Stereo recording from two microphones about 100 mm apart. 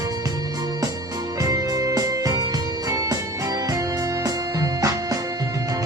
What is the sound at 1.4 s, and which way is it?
Music, 35° right (ahead or behind).